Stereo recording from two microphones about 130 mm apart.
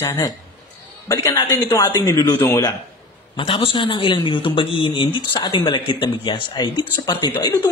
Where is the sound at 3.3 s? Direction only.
40° left (ahead or behind).